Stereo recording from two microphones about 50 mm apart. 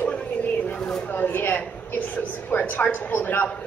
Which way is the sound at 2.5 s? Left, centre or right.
Left.